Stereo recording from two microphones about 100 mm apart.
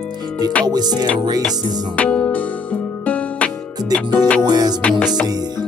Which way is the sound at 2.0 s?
15° left (ahead or behind).